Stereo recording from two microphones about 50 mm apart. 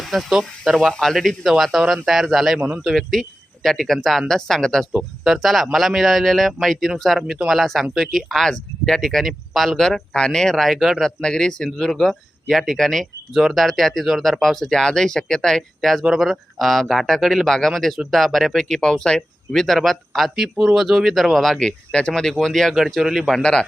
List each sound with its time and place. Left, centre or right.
0.0 s a sound: centre
0.3 s speech: centre
0.9 s speech: centre
2.6 s a man's voice: right
3.0 s speech: centre
11.0 s speech: centre
22.9 s speech: centre
23.4 s speech: centre